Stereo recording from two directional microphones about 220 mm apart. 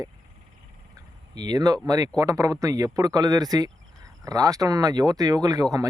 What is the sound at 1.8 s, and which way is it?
Speech, 15° right (ahead or behind).